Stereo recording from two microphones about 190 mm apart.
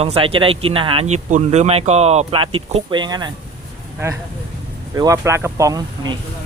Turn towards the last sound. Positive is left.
turn(degrees=-20)  # may be behind; listen again after turning